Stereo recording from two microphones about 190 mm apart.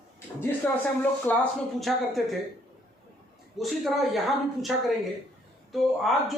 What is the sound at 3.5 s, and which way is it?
A woman's voice, centre (ahead or behind).